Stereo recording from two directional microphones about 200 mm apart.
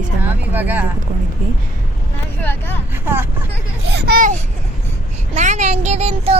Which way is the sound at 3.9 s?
55° right (ahead or behind).